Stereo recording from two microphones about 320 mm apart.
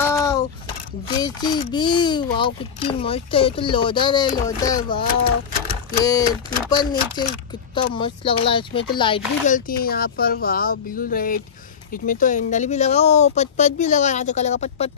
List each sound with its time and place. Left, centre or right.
0.0 s a sound: centre
1.0 s a child's voice: centre
6.0 s a child's voice: centre